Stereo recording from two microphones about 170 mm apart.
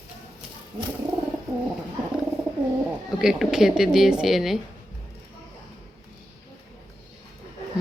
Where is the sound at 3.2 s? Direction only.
5° right (ahead or behind).